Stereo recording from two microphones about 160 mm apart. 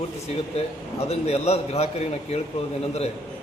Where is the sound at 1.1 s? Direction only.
40° left (ahead or behind).